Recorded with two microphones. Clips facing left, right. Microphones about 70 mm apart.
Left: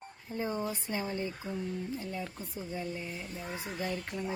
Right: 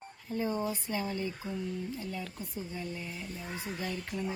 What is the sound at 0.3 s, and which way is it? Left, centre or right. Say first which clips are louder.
Speech: right 2 dB; left.